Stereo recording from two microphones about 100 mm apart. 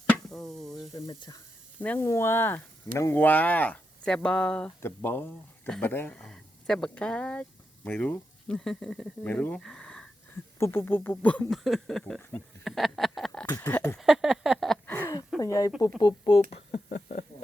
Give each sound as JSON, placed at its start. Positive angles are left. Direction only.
{"t": 0.3, "sound": "a sound", "side_deg": 0}
{"t": 1.8, "sound": "speech", "side_deg": 15}
{"t": 2.0, "sound": "speech", "side_deg": 30}
{"t": 4.8, "sound": "speech", "side_deg": 20}
{"t": 9.2, "sound": "speech", "side_deg": 15}
{"t": 10.6, "sound": "speech", "side_deg": 25}
{"t": 11.5, "sound": "a sound", "side_deg": 0}
{"t": 13.6, "sound": "speech", "side_deg": 15}
{"t": 13.9, "sound": "a sound", "side_deg": 0}
{"t": 14.8, "sound": "a sound", "side_deg": 20}
{"t": 15.4, "sound": "speech", "side_deg": 35}
{"t": 16.0, "sound": "speech", "side_deg": 45}
{"t": 16.5, "sound": "speech", "side_deg": 90}